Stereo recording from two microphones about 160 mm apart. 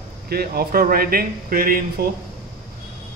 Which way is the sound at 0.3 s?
70° right (ahead or behind).